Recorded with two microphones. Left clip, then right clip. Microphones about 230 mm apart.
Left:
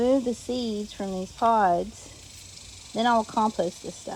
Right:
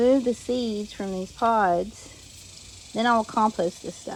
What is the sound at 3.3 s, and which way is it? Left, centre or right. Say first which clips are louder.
Speech: right 2 dB; right.